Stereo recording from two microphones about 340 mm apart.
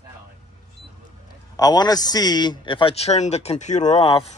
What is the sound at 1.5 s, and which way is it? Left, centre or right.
A man's voice, centre.